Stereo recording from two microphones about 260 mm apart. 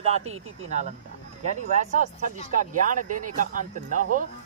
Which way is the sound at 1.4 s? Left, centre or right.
Right.